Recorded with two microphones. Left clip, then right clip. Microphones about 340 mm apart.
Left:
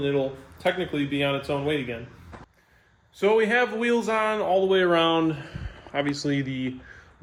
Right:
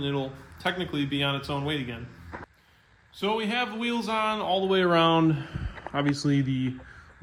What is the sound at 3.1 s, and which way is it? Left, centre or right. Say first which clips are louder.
Speech: left 7 dB; centre.